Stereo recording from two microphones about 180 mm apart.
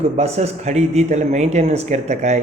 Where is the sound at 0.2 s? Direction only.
35° right (ahead or behind).